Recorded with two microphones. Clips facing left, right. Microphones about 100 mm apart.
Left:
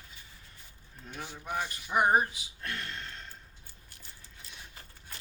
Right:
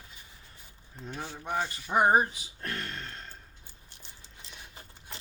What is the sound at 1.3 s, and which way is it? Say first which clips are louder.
Speech: right 3 dB; 20° right (ahead or behind).